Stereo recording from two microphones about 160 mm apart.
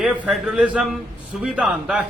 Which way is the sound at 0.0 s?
5° right (ahead or behind).